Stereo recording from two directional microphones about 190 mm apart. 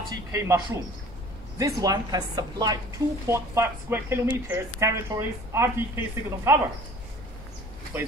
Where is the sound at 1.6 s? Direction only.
20° right (ahead or behind).